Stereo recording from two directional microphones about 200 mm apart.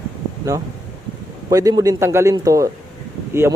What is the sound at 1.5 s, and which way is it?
Speech, 15° right (ahead or behind).